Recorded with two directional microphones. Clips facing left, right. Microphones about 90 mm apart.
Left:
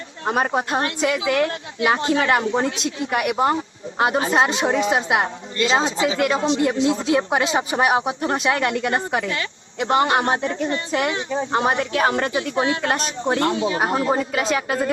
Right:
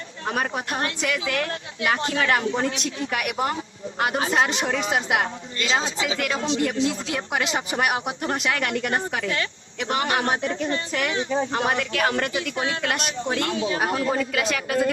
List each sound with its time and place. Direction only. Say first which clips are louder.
0.3 s a woman's voice: left 6 dB; 25° left (ahead or behind)